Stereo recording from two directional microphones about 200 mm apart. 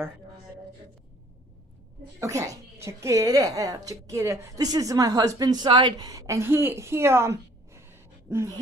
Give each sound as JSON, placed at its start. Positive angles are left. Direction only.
{"t": 2.1, "sound": "speech", "side_deg": -15}